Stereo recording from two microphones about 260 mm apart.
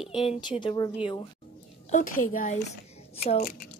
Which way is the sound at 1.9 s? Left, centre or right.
Left.